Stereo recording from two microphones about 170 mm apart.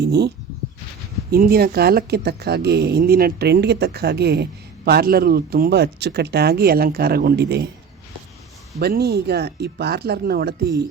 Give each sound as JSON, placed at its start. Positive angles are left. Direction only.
{"t": 0.0, "sound": "speech", "side_deg": -75}
{"t": 1.3, "sound": "speech", "side_deg": -60}
{"t": 8.8, "sound": "speech", "side_deg": -70}